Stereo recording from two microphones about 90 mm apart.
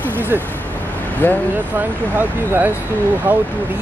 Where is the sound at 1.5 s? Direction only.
20° right (ahead or behind).